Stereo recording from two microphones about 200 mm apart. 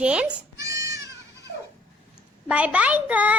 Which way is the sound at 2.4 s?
5° right (ahead or behind).